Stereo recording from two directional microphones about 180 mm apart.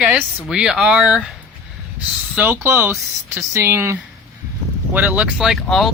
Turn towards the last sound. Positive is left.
turn(degrees=0)  # may be behind; listen again after turning